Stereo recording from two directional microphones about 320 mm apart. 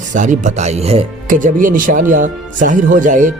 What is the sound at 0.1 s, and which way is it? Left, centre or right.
Speech, right.